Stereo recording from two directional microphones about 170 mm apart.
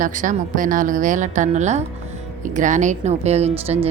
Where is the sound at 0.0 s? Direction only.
50° right (ahead or behind).